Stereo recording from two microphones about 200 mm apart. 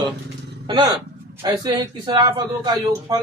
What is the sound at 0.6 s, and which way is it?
A man's voice, 25° right (ahead or behind).